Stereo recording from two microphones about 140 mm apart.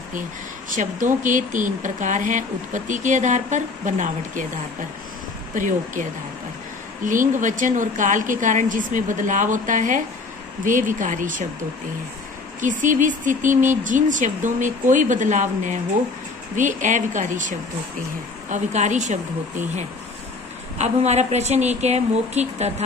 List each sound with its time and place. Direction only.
0.7 s speech: 65° right (ahead or behind)
5.5 s a woman's voice: 65° right (ahead or behind)
7.1 s a woman's voice: 70° right (ahead or behind)
12.5 s speech: 65° right (ahead or behind)
20.7 s a woman's voice: 55° right (ahead or behind)